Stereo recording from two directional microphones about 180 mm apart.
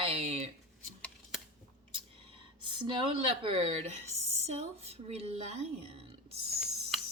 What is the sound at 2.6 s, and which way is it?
A woman's voice, 30° right (ahead or behind).